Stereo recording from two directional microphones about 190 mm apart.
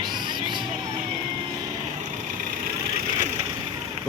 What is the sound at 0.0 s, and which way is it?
Music, 25° right (ahead or behind).